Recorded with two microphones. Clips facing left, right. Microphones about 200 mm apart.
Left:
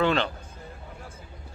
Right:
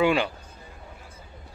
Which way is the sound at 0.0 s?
10° right (ahead or behind).